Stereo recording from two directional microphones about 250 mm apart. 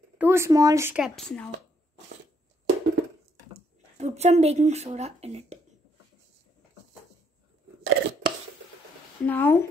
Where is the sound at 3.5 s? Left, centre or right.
Right.